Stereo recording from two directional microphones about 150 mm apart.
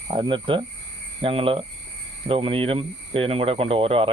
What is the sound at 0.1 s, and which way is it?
Speech, 35° right (ahead or behind).